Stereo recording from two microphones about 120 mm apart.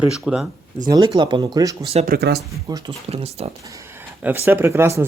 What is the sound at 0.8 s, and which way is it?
Speech, 30° right (ahead or behind).